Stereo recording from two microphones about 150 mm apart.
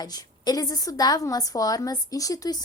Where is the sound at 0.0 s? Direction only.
25° left (ahead or behind).